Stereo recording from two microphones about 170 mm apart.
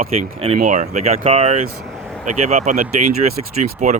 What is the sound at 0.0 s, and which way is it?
Speech, 40° right (ahead or behind).